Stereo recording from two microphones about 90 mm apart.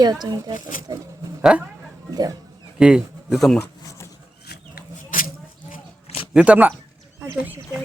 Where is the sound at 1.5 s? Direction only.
10° right (ahead or behind).